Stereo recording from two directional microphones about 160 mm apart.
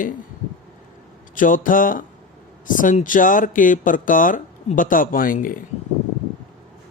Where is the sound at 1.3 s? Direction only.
55° left (ahead or behind).